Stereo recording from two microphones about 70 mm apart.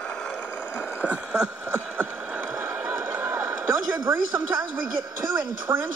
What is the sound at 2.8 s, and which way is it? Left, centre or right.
Run, right.